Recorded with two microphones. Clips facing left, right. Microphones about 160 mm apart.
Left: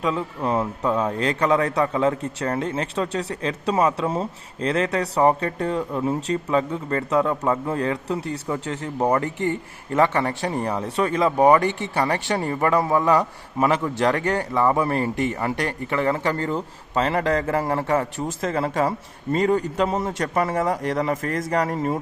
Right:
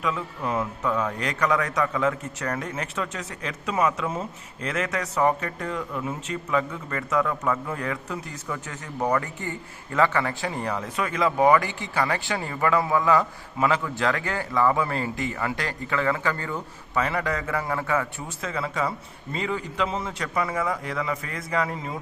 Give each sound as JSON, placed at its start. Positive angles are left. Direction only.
{"t": 0.0, "sound": "a man's voice", "side_deg": 30}